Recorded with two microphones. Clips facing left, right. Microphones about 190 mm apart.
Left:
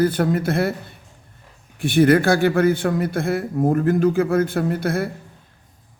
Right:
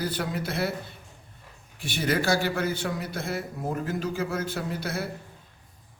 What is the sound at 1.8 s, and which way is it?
A man's voice, 55° left (ahead or behind).